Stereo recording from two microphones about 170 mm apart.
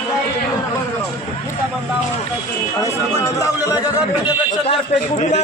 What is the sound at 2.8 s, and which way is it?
Speech, 20° left (ahead or behind).